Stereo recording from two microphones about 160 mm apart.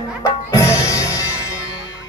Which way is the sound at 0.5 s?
20° left (ahead or behind).